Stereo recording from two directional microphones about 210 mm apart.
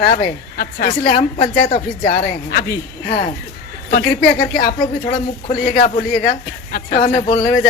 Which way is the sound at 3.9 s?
45° left (ahead or behind).